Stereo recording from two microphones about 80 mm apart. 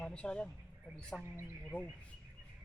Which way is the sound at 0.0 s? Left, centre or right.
Centre.